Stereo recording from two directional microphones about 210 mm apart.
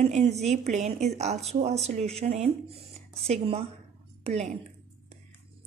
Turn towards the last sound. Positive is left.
turn(degrees=-30)  # may be behind; listen again after turning